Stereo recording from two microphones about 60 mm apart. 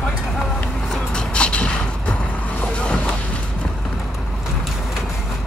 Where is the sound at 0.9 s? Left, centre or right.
Centre.